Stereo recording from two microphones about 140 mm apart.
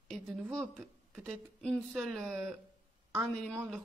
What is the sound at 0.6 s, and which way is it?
Speech, 5° left (ahead or behind).